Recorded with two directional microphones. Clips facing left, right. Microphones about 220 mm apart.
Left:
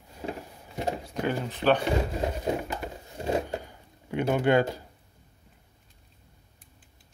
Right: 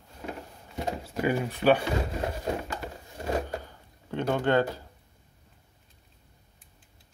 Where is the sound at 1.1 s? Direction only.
10° right (ahead or behind).